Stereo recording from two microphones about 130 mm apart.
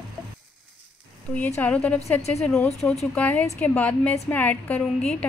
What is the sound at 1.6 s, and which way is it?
A woman's voice, 10° left (ahead or behind).